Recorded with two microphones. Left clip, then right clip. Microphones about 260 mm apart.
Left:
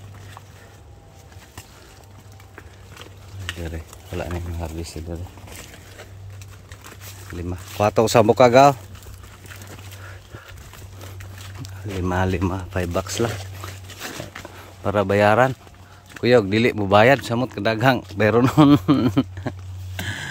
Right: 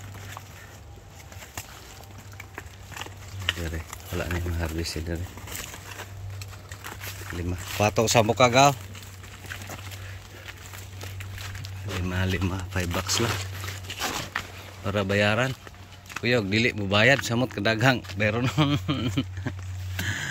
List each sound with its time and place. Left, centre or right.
4.2 s speech: centre
7.4 s speech: centre
11.6 s speech: centre
13.9 s dog: centre
14.9 s speech: centre
18.1 s speech: left
20.0 s a sound: centre